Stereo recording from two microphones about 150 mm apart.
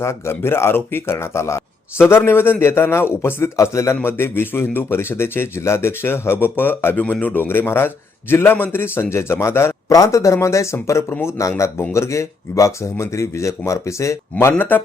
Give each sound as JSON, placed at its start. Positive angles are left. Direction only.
{"t": 0.0, "sound": "a man's voice", "side_deg": 15}